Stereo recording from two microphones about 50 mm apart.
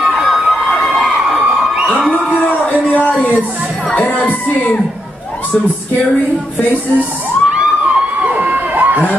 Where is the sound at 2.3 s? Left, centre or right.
Left.